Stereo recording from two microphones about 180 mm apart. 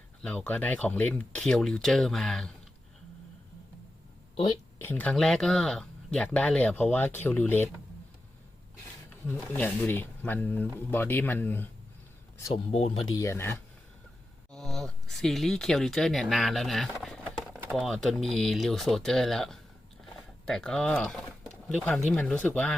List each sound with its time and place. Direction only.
0.2 s speech: 5° left (ahead or behind)
4.8 s speech: 10° left (ahead or behind)
9.2 s speech: 10° left (ahead or behind)
12.7 s speech: 35° left (ahead or behind)
13.1 s speech: 15° left (ahead or behind)
14.5 s speech: centre (ahead or behind)